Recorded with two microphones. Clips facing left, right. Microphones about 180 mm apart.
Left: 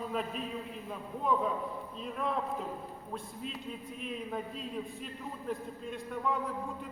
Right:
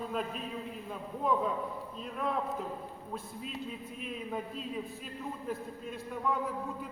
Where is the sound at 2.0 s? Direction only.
Centre (ahead or behind).